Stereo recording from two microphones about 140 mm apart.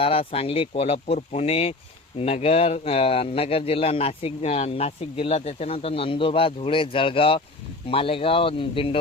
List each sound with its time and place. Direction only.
0.0 s speech: 40° left (ahead or behind)